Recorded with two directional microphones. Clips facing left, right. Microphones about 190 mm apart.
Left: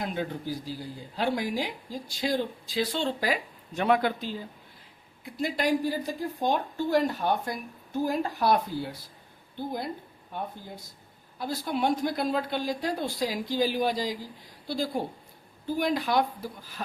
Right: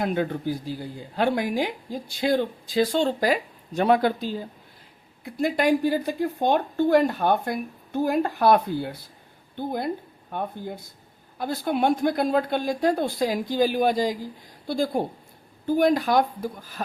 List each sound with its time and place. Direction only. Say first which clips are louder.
0.0 s speech: right 7 dB; 55° right (ahead or behind); by 4.3 s 35° right (ahead or behind)
5.4 s speech: right 5 dB; 55° right (ahead or behind)